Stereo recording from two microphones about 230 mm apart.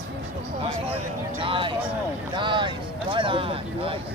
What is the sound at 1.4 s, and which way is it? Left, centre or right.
Speech, right.